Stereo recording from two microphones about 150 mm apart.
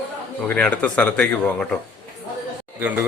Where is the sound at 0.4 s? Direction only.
10° left (ahead or behind).